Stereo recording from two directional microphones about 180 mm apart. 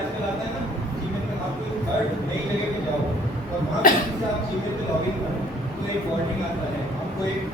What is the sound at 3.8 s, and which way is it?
Speech, 50° left (ahead or behind).